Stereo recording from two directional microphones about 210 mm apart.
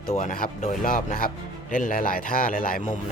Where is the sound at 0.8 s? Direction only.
40° left (ahead or behind).